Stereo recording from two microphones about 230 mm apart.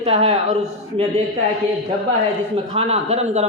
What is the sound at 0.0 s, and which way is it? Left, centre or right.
Speech, right.